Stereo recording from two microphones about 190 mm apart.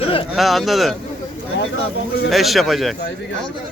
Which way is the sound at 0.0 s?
30° left (ahead or behind).